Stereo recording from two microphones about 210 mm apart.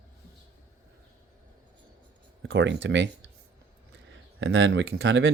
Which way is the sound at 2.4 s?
60° right (ahead or behind).